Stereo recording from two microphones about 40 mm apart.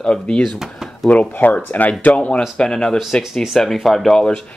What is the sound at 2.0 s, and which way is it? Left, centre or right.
Speech, left.